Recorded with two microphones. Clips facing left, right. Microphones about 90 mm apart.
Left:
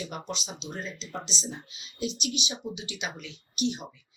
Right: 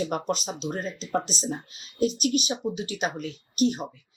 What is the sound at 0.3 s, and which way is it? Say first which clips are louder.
Speech: right 8 dB; 45° right (ahead or behind).